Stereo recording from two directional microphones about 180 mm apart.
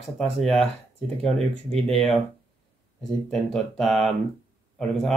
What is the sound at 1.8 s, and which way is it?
Speech, centre (ahead or behind).